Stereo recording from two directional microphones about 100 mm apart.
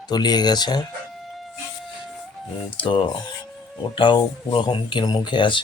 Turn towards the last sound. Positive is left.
turn(degrees=50)  # may be behind; listen again after turning